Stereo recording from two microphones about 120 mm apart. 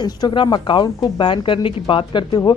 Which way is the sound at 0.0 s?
40° left (ahead or behind).